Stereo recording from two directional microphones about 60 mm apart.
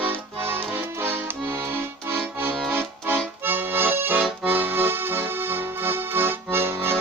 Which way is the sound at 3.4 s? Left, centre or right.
Right.